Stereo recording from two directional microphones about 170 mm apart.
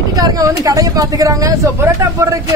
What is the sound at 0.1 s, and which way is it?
Speech, 20° right (ahead or behind).